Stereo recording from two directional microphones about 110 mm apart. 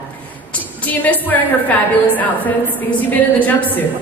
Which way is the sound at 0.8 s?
15° left (ahead or behind).